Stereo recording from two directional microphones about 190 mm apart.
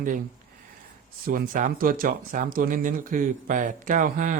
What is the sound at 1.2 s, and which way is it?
Speech, 50° right (ahead or behind).